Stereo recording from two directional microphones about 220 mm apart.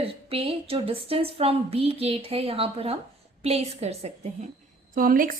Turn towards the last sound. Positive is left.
turn(degrees=-40)  # may be behind; listen again after turning